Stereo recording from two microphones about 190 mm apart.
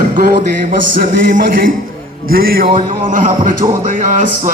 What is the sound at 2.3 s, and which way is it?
Music, 50° right (ahead or behind).